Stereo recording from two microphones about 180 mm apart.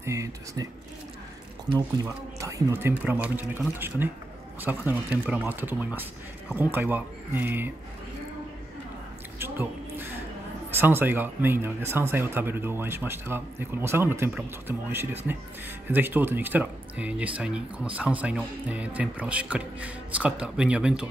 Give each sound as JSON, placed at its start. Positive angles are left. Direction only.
{"t": 0.0, "sound": "speech", "side_deg": -15}
{"t": 2.0, "sound": "speech", "side_deg": -15}
{"t": 9.4, "sound": "a sound", "side_deg": -10}
{"t": 10.8, "sound": "speech", "side_deg": -10}